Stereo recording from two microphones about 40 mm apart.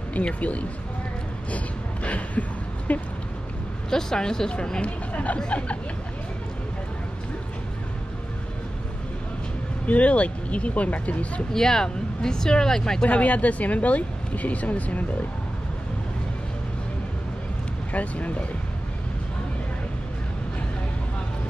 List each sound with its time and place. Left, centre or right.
0.2 s speech: left
2.0 s a sound: left
2.9 s speech: left
3.9 s speech: centre
4.8 s speech: left
9.8 s speech: left
11.5 s speech: centre
13.0 s speech: left
17.9 s speech: left